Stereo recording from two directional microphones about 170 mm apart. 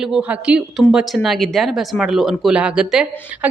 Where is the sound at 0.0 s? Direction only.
5° right (ahead or behind).